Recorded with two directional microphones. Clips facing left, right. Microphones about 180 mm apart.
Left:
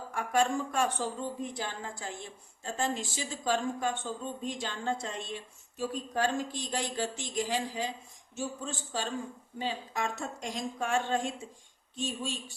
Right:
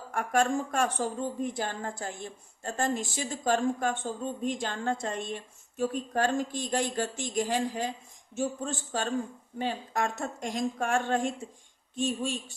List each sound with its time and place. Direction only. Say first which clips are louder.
0.1 s speech: right 2 dB; 50° right (ahead or behind)